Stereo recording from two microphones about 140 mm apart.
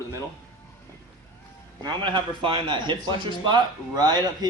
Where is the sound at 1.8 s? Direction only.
35° right (ahead or behind).